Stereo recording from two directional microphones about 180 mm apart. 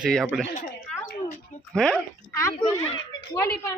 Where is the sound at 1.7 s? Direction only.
5° left (ahead or behind).